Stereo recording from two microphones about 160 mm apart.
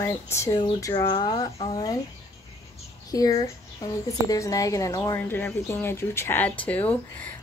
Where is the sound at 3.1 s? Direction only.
20° left (ahead or behind).